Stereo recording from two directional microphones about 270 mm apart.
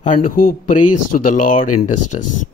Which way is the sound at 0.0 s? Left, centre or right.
Left.